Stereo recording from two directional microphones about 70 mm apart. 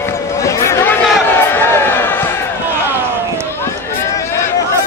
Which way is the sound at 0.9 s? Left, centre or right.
Left.